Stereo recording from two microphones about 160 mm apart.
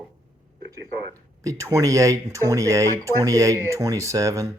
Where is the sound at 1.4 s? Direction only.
20° right (ahead or behind).